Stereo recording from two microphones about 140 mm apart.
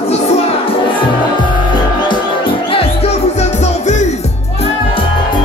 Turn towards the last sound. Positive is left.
turn(degrees=55)  # may be behind; listen again after turning